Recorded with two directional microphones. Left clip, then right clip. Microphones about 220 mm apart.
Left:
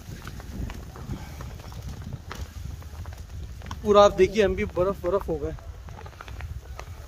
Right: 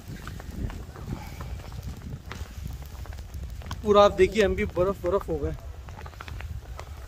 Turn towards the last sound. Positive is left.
turn(degrees=-5)  # may be behind; listen again after turning